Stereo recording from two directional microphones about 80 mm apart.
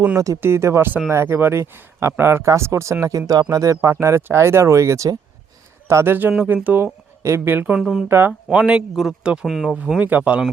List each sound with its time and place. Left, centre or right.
0.3 s speech: right
7.2 s speech: right
7.4 s speech: right
7.8 s speech: centre
8.0 s speech: right
8.3 s speech: centre